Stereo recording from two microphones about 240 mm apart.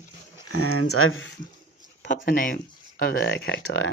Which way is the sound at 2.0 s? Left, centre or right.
Left.